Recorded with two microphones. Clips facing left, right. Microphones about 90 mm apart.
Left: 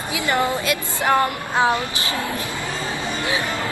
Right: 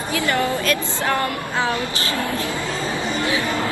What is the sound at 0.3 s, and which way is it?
Speech, 20° left (ahead or behind).